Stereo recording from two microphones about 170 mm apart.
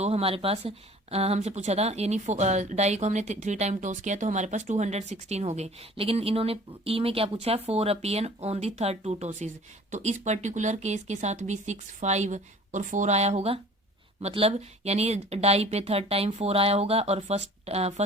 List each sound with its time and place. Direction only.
0.0 s speech: 35° right (ahead or behind)